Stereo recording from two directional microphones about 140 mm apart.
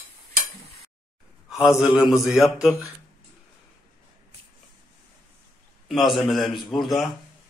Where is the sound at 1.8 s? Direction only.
5° right (ahead or behind).